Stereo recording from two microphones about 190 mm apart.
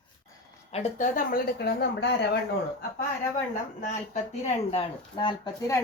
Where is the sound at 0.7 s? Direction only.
35° left (ahead or behind); by 2.4 s 60° left (ahead or behind).